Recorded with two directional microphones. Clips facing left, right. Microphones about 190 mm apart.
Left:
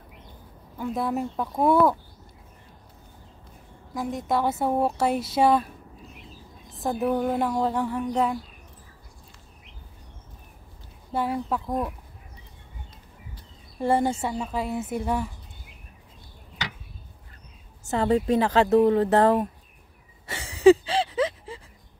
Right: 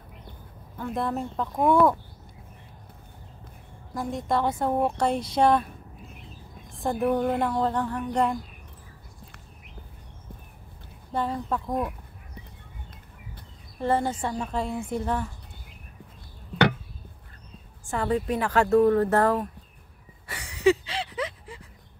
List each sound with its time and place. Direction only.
0.7 s speech: 10° left (ahead or behind)
3.9 s speech: centre (ahead or behind)
6.8 s speech: centre (ahead or behind)
11.1 s speech: 10° left (ahead or behind)
13.7 s speech: 15° left (ahead or behind)
17.9 s speech: 25° left (ahead or behind)
20.2 s a sound: 25° left (ahead or behind)